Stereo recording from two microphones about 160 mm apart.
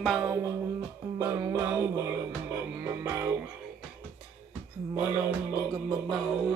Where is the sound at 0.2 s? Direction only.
15° right (ahead or behind).